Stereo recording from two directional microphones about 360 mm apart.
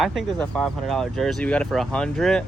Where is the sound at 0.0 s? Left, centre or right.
Centre.